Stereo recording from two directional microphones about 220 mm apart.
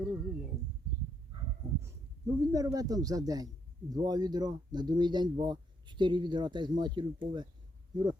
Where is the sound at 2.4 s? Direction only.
15° right (ahead or behind).